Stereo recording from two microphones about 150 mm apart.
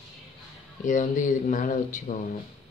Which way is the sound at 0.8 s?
60° left (ahead or behind).